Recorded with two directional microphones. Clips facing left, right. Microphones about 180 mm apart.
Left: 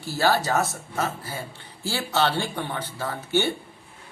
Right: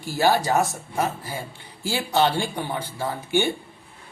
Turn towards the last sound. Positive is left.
turn(degrees=-15)  # may be behind; listen again after turning